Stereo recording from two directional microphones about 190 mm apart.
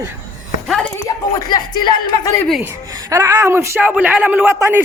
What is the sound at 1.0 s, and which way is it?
Speech, 20° left (ahead or behind).